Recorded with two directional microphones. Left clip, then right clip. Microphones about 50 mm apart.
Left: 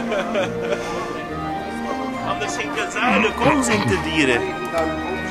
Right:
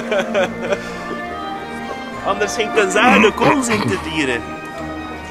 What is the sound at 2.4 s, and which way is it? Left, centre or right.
Speech, right.